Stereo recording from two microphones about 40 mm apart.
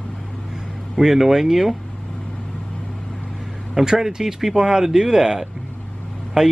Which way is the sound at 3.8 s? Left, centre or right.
Centre.